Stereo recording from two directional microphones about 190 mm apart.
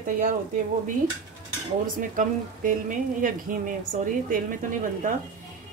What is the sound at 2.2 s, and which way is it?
A woman's voice, 45° right (ahead or behind).